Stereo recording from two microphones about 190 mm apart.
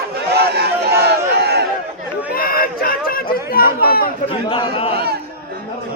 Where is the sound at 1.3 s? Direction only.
60° right (ahead or behind).